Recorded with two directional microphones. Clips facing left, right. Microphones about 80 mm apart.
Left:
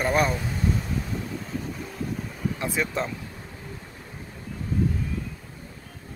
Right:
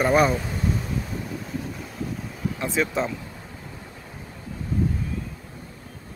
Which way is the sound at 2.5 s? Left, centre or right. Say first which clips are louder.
Right 4 dB; centre.